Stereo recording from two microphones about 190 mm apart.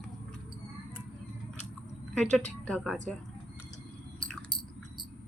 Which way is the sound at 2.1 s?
5° left (ahead or behind).